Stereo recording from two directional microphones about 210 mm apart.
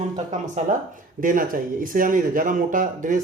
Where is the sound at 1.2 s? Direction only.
40° right (ahead or behind).